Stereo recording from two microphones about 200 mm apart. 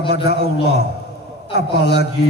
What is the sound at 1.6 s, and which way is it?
Speech, 55° left (ahead or behind).